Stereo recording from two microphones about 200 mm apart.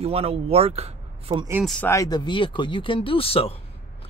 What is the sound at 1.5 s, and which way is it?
Speech, 5° right (ahead or behind).